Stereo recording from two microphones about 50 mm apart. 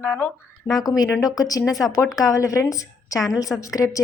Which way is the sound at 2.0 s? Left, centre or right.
Left.